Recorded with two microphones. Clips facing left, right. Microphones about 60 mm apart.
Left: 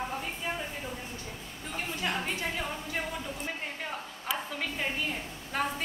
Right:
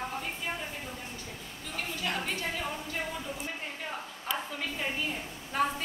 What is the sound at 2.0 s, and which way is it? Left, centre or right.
Speech, centre.